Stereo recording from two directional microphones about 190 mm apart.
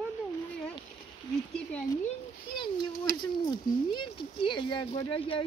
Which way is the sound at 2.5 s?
25° left (ahead or behind).